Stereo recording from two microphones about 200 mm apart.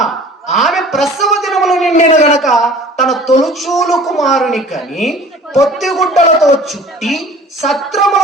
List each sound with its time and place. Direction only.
0.5 s a sound: centre (ahead or behind)
1.9 s speech: 35° left (ahead or behind)
2.4 s speech: centre (ahead or behind)